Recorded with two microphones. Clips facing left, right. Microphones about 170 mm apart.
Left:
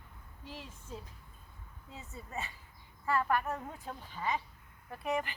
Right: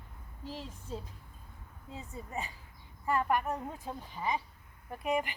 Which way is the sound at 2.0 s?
15° right (ahead or behind).